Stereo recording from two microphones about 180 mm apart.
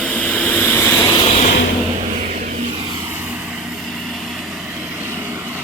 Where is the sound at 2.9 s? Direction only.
10° right (ahead or behind).